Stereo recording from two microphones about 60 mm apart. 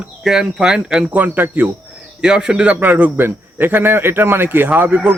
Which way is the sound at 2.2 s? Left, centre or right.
Centre.